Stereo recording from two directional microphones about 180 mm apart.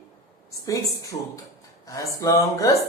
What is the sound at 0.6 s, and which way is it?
A woman's voice, 15° left (ahead or behind).